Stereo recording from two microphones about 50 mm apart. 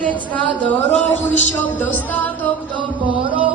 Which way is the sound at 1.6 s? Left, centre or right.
Left.